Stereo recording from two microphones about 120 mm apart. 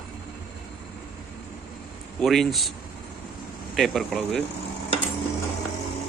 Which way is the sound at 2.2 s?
Centre (ahead or behind).